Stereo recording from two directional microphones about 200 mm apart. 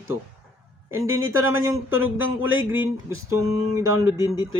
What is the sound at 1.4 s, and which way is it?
Speech, 15° right (ahead or behind).